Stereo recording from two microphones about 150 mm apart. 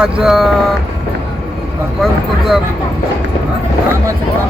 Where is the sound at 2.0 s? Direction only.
Centre (ahead or behind).